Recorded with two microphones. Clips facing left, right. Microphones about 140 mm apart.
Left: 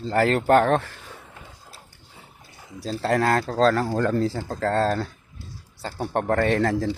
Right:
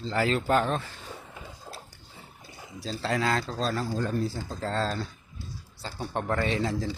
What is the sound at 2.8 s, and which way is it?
Speech, 50° left (ahead or behind).